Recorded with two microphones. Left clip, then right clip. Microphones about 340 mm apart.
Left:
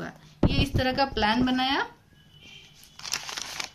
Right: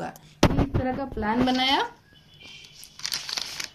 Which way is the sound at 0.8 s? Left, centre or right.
Left.